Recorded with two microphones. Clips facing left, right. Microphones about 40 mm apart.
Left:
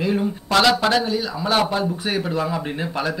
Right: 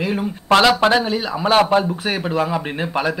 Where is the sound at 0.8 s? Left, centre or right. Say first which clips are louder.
Right 3 dB; right.